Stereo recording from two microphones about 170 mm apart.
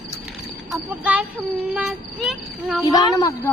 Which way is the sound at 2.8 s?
20° left (ahead or behind).